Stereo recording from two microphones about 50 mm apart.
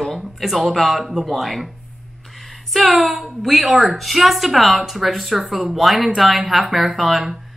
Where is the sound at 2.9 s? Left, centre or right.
Centre.